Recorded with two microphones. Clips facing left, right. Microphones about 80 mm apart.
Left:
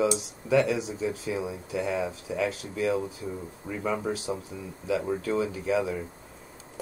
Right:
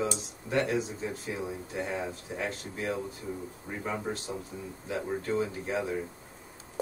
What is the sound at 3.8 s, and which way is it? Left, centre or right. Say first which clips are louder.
A man's voice: left 5 dB; left.